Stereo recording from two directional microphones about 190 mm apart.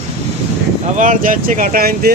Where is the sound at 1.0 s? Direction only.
45° right (ahead or behind).